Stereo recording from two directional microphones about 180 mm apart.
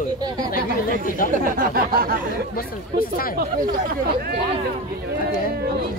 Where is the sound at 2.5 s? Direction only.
55° left (ahead or behind).